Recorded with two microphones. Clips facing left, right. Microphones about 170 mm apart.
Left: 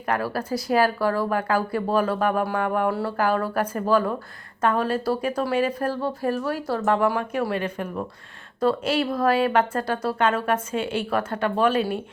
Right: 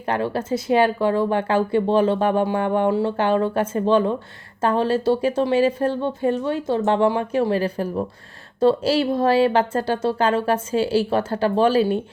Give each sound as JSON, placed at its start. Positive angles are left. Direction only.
{"t": 0.0, "sound": "speech", "side_deg": -25}